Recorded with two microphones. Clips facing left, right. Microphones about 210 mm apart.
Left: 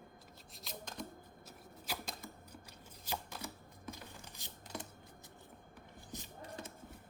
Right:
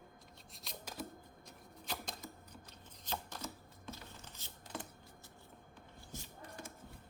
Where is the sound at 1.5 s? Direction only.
5° left (ahead or behind).